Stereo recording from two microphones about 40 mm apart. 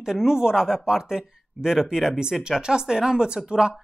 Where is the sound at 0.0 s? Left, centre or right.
Centre.